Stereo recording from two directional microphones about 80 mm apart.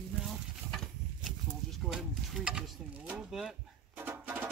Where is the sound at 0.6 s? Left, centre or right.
Centre.